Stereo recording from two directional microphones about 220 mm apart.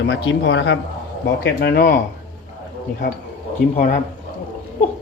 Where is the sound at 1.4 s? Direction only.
45° left (ahead or behind).